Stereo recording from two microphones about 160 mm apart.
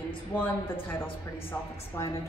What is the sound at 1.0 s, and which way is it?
Speech, 35° left (ahead or behind).